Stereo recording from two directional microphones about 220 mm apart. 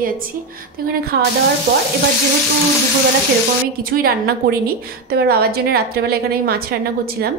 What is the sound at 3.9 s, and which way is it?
A woman's voice, 40° right (ahead or behind).